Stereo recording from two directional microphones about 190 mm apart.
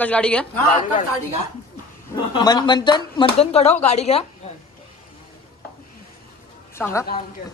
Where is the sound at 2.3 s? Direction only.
25° left (ahead or behind).